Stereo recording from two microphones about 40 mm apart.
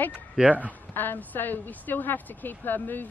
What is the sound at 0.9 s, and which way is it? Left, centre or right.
Speech, left.